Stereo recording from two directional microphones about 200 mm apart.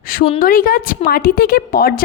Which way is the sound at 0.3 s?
45° left (ahead or behind).